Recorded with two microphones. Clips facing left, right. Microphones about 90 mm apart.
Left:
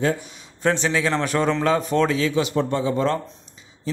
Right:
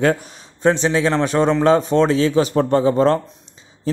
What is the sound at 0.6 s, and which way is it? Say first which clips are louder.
A man's voice: right 5 dB; 25° right (ahead or behind).